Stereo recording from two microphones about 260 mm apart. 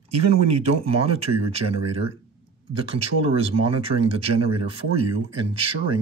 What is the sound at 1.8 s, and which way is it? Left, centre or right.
Speech, right.